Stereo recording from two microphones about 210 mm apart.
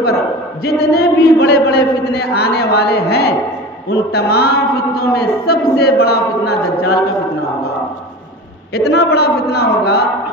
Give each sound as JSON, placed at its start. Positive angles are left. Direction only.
{"t": 0.7, "sound": "a man's voice", "side_deg": 50}
{"t": 8.7, "sound": "a man's voice", "side_deg": 50}